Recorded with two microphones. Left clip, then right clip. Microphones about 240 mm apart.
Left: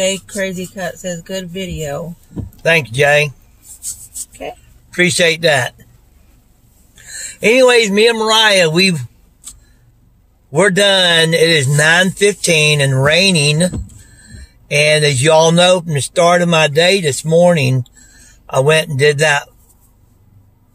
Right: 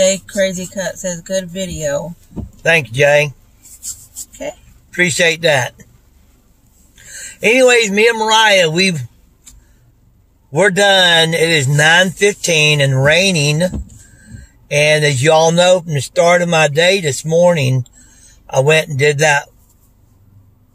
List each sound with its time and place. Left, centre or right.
0.3 s speech: centre
2.6 s speech: centre
4.9 s speech: centre
7.2 s speech: centre
10.5 s speech: centre